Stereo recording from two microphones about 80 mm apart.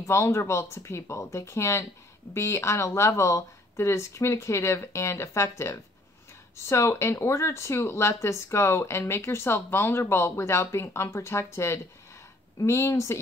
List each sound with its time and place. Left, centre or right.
0.0 s speech: left